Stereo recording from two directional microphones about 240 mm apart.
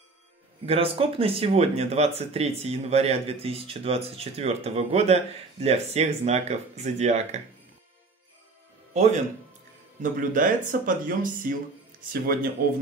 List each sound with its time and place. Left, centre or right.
0.7 s speech: right
8.9 s speech: right